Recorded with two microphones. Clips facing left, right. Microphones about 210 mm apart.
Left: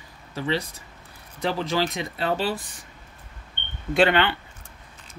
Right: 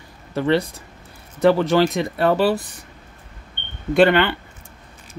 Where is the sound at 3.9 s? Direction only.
50° right (ahead or behind).